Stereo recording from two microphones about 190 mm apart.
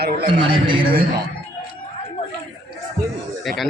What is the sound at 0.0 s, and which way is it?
Speech, 55° right (ahead or behind).